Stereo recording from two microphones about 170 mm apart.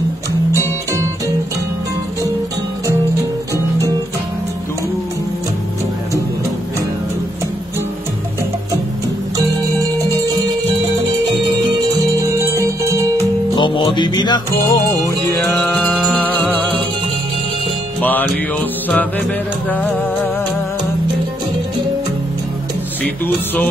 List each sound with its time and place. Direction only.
3.5 s music: 20° right (ahead or behind)
9.4 s music: 20° right (ahead or behind)
12.2 s music: 15° right (ahead or behind)
13.6 s music: 30° left (ahead or behind)
15.5 s music: 5° left (ahead or behind)
18.0 s music: 10° left (ahead or behind)
23.0 s speech: 10° left (ahead or behind)